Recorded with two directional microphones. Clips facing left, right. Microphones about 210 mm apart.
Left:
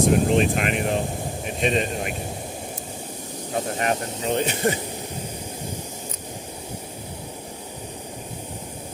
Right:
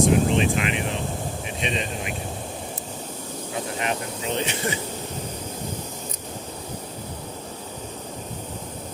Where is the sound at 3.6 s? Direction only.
45° left (ahead or behind).